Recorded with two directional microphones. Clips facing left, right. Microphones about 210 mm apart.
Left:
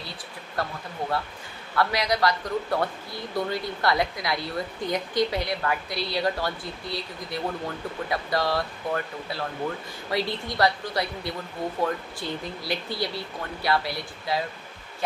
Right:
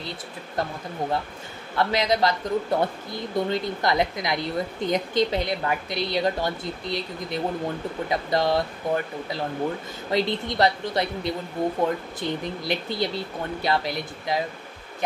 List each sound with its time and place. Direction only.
0.6 s a woman's voice: 20° right (ahead or behind)
1.8 s a woman's voice: 25° right (ahead or behind)